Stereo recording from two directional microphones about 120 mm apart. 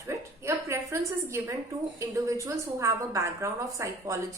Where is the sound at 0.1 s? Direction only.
20° right (ahead or behind).